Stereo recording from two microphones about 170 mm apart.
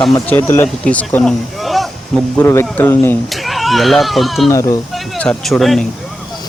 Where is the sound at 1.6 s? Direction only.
Centre (ahead or behind).